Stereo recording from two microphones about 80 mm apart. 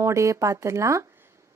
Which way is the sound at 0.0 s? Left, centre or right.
Right.